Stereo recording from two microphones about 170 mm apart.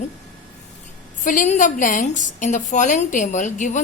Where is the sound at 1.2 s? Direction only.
50° left (ahead or behind).